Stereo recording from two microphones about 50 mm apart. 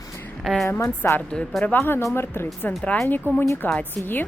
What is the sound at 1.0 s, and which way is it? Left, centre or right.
Speech, left.